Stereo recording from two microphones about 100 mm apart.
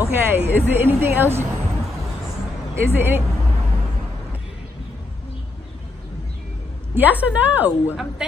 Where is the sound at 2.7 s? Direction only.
25° right (ahead or behind).